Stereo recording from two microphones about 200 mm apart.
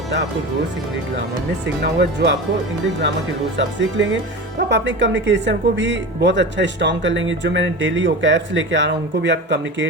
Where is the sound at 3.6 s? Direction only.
65° right (ahead or behind).